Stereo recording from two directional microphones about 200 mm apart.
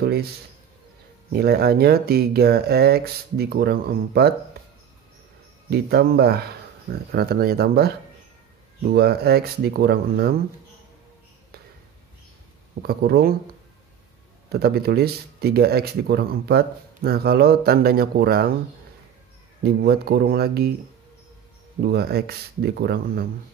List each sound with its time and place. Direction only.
0.0 s speech: 50° right (ahead or behind)
1.3 s speech: 50° right (ahead or behind)
4.6 s a sound: 50° right (ahead or behind)
5.7 s speech: 55° right (ahead or behind)
12.8 s speech: 50° right (ahead or behind)
14.5 s speech: 50° right (ahead or behind)
19.6 s speech: 50° right (ahead or behind)
21.8 s speech: 50° right (ahead or behind)